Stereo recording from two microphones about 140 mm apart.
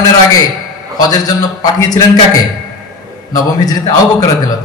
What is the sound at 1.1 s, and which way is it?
Speech, 30° left (ahead or behind).